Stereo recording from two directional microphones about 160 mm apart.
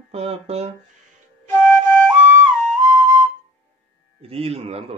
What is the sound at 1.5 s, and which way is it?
Flute, 10° left (ahead or behind).